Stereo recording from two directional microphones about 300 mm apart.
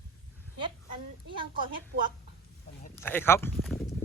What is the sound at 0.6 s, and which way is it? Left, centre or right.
A woman's voice, centre.